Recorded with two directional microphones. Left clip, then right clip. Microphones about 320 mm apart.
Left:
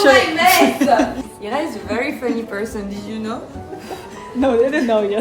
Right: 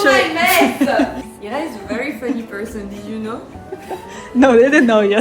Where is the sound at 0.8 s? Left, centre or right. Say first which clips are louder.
Left 3 dB; centre.